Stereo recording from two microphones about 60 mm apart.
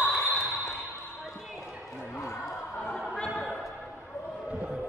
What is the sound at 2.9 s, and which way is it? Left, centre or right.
Opera, centre.